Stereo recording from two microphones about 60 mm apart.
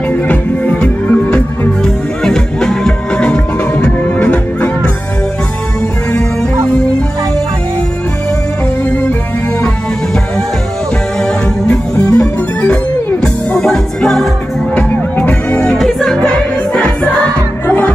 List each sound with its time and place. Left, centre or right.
0.1 s music: left
1.8 s music: centre
11.1 s music: centre
14.8 s music: left
15.8 s music: centre
16.7 s music: centre